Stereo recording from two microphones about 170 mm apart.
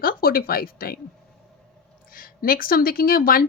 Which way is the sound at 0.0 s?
60° left (ahead or behind).